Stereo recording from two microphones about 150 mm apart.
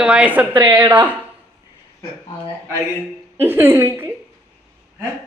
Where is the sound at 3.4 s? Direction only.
15° right (ahead or behind).